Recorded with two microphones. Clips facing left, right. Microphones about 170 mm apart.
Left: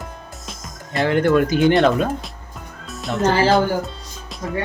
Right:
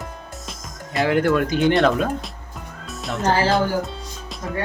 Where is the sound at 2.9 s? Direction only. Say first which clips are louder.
Left 3 dB; centre (ahead or behind).